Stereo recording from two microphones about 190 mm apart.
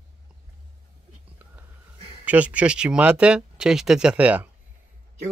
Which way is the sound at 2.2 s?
5° right (ahead or behind).